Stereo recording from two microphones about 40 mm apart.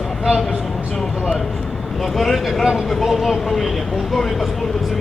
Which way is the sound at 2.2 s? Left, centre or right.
Centre.